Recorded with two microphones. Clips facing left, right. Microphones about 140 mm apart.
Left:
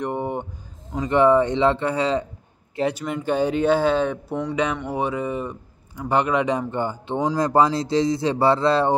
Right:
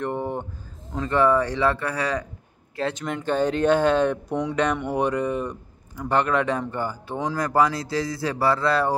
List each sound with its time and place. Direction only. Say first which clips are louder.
0.0 s a sound: left 1 dB; 15° left (ahead or behind)
0.9 s speech: left 3 dB; 20° left (ahead or behind)
2.7 s speech: left 3 dB; 15° left (ahead or behind)